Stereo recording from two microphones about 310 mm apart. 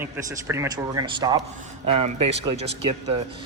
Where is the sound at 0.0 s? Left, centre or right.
Centre.